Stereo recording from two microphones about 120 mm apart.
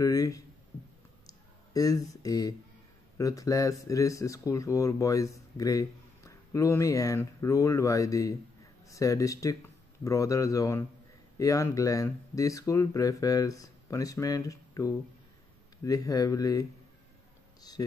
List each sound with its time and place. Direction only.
0.0 s speech: 30° left (ahead or behind)
1.2 s a sound: 30° left (ahead or behind)
3.2 s speech: 30° left (ahead or behind)